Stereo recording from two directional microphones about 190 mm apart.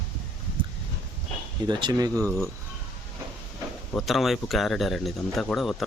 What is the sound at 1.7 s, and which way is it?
Speech, 25° right (ahead or behind).